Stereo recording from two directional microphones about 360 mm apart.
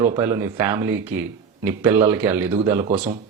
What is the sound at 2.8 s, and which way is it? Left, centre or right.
Speech, centre.